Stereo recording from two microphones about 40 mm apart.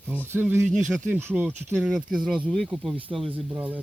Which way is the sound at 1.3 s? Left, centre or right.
Right.